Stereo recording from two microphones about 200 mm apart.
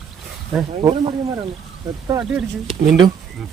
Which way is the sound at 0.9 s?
25° right (ahead or behind).